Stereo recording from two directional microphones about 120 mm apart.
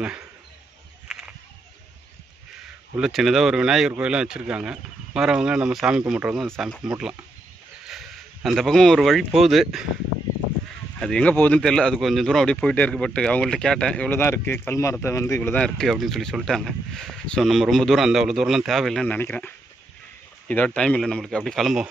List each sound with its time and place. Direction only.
1.1 s a sound: 5° right (ahead or behind)
3.0 s speech: centre (ahead or behind)
7.9 s a sound: centre (ahead or behind)
9.4 s speech: centre (ahead or behind)
11.0 s speech: 5° left (ahead or behind); by 15.5 s 25° left (ahead or behind)
15.5 s speech: 5° left (ahead or behind)
19.0 s speech: 15° left (ahead or behind); by 21.8 s centre (ahead or behind)